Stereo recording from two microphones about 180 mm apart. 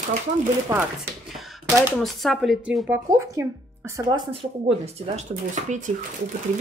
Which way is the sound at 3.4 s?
15° right (ahead or behind).